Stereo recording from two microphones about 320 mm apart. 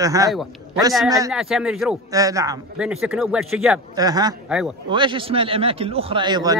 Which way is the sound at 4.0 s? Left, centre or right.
Centre.